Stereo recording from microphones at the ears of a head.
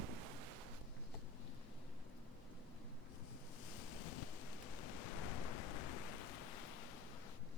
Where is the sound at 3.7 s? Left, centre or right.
Left.